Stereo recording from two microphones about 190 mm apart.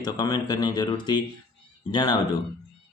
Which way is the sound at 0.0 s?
20° left (ahead or behind).